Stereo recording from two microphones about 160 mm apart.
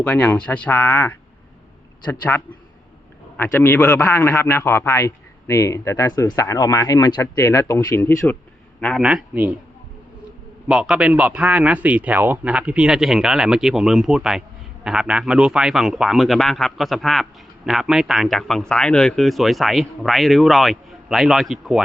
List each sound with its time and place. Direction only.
0.0 s a man's voice: 10° left (ahead or behind)
3.3 s a man's voice: 15° left (ahead or behind)
9.0 s a man's voice: 5° right (ahead or behind)
10.7 s a man's voice: 5° right (ahead or behind)